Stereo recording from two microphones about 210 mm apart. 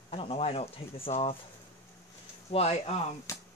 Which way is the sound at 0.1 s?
25° left (ahead or behind).